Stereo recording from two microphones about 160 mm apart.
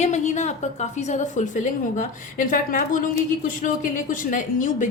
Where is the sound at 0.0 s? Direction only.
45° left (ahead or behind).